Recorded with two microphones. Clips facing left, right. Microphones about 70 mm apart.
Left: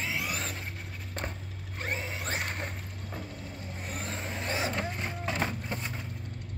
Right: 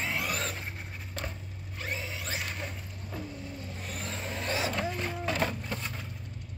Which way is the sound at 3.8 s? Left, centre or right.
Left.